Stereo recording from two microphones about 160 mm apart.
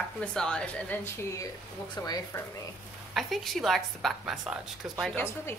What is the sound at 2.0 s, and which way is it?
Speech, 25° left (ahead or behind).